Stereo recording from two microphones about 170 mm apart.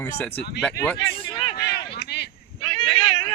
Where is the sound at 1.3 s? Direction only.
25° left (ahead or behind).